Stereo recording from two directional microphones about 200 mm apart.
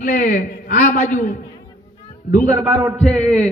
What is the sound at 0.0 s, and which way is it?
A man's voice, 40° left (ahead or behind).